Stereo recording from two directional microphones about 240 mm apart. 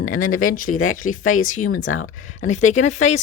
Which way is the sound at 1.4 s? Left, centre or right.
Left.